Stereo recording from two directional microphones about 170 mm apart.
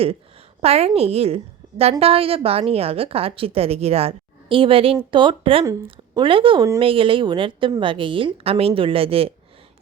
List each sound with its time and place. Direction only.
0.0 s a woman's voice: 35° right (ahead or behind)